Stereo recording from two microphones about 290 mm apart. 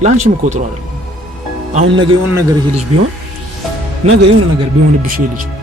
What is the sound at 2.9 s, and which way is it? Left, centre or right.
Speech, right.